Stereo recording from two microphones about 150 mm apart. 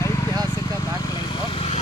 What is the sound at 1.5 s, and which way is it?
Vehicle, 40° left (ahead or behind).